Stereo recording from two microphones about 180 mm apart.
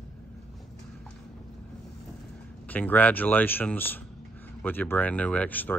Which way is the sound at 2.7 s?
10° left (ahead or behind).